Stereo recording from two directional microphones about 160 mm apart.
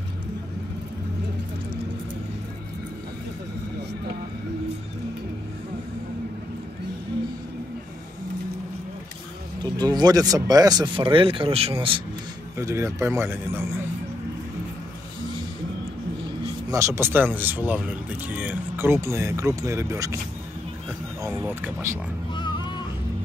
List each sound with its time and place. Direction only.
9.6 s speech: 25° right (ahead or behind)
12.5 s speech: 15° right (ahead or behind)
16.7 s speech: 15° right (ahead or behind)
21.2 s speech: 15° right (ahead or behind)
22.3 s oink: 30° left (ahead or behind)